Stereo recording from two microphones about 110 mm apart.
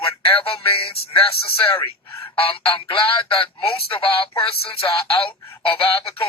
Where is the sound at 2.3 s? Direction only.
55° left (ahead or behind).